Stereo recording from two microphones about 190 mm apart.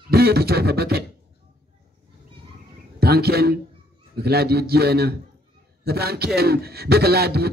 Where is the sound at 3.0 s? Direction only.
55° right (ahead or behind).